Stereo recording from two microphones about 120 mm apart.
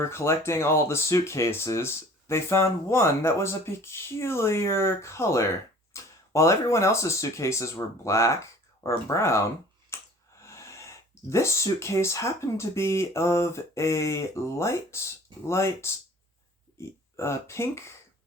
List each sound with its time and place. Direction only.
0.0 s speech: 25° left (ahead or behind)
9.9 s a sound: 25° left (ahead or behind)
10.4 s speech: 25° left (ahead or behind)
17.2 s speech: 20° left (ahead or behind)